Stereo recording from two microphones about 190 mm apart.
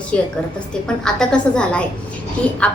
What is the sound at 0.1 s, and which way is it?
A woman's voice, 5° left (ahead or behind).